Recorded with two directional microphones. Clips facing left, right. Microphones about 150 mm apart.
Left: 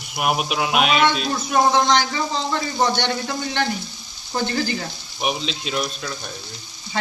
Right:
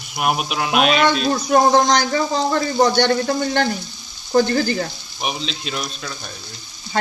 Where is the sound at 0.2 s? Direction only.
5° left (ahead or behind).